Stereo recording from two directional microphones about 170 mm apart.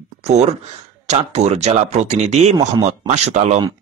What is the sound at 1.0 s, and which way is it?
Speech, 40° right (ahead or behind).